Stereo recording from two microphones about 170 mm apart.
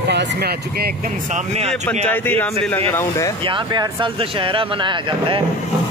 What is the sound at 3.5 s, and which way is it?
Speech, 30° right (ahead or behind).